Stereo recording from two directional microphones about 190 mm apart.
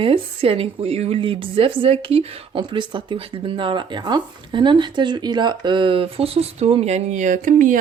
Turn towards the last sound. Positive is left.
turn(degrees=-45)  # may be behind; listen again after turning